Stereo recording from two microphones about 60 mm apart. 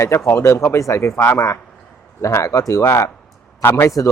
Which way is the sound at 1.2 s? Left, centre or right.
Left.